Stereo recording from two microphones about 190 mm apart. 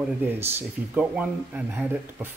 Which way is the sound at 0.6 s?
10° right (ahead or behind).